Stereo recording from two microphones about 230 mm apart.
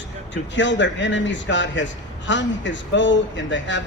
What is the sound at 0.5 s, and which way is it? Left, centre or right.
A man's voice, left.